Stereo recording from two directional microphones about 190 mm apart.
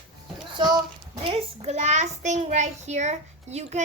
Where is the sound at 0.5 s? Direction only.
25° right (ahead or behind).